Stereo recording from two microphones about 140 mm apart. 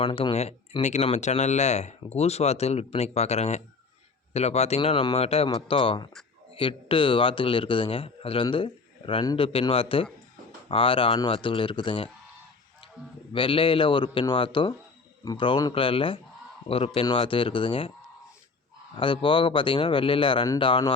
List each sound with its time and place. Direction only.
0.0 s a man's voice: 40° left (ahead or behind)
13.3 s a man's voice: 40° left (ahead or behind)
18.9 s a man's voice: 35° left (ahead or behind)